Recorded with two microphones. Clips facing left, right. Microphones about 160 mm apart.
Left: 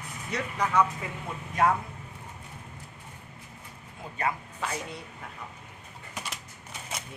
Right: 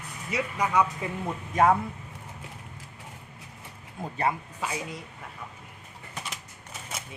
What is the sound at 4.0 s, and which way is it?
Speech, 45° right (ahead or behind).